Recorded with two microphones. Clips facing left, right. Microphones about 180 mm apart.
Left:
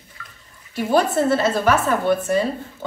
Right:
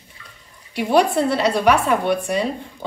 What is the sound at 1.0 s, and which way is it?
Speech, 5° left (ahead or behind).